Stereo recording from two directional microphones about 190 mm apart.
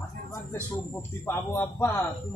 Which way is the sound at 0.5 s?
10° left (ahead or behind).